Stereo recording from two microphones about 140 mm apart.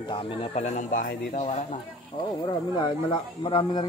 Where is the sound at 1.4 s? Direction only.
45° left (ahead or behind).